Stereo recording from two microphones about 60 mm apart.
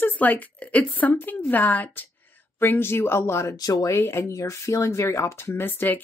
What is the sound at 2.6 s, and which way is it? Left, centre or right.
Speech, left.